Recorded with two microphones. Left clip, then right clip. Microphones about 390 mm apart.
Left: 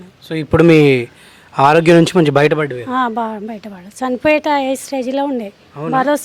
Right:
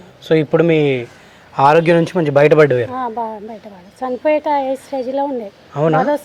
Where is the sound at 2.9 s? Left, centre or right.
Left.